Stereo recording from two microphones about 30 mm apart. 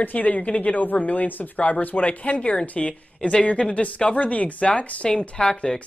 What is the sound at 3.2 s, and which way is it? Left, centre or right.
Speech, left.